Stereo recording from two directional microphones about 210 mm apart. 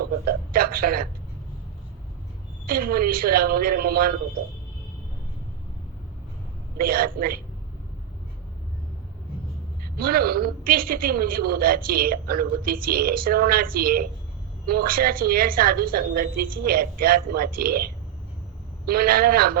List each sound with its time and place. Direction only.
0.5 s a man's voice: 45° right (ahead or behind)
2.6 s a woman's voice: 45° right (ahead or behind)
6.7 s a woman's voice: 45° right (ahead or behind)
10.0 s a woman's voice: 45° right (ahead or behind)
18.9 s a woman's voice: 45° right (ahead or behind)